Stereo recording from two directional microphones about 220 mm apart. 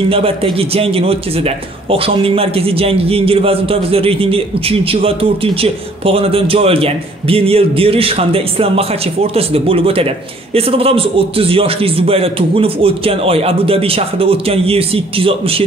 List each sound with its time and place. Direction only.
0.1 s a man's voice: 25° right (ahead or behind)